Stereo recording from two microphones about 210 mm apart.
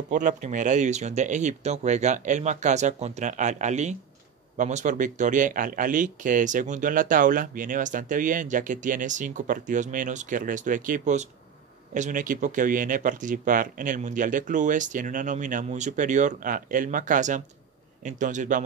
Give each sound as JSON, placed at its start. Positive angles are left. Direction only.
{"t": 0.1, "sound": "speech", "side_deg": -35}